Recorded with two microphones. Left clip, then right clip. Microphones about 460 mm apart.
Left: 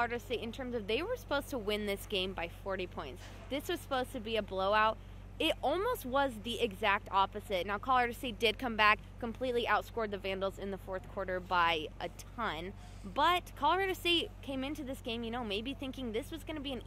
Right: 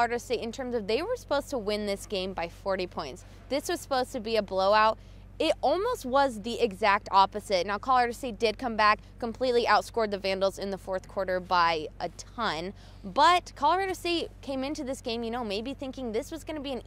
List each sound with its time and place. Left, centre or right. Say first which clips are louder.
0.0 s speech: right 7 dB; right